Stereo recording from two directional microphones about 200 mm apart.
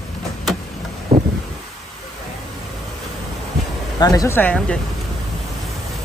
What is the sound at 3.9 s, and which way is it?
Speech, 20° left (ahead or behind).